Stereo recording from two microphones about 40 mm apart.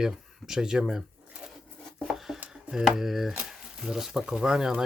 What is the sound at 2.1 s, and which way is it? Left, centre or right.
Dishes, centre.